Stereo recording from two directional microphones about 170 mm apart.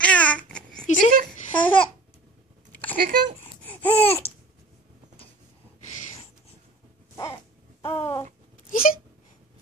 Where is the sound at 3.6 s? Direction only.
10° left (ahead or behind).